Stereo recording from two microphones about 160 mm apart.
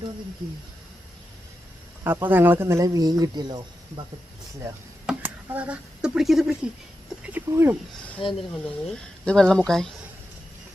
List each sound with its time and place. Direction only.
2.0 s speech: 15° right (ahead or behind)
5.0 s speech: 10° right (ahead or behind)
7.2 s speech: 15° right (ahead or behind)
8.2 s speech: 30° left (ahead or behind)
8.6 s speech: 5° left (ahead or behind)